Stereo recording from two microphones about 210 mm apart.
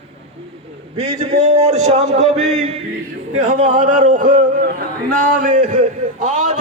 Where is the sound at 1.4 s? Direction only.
30° right (ahead or behind).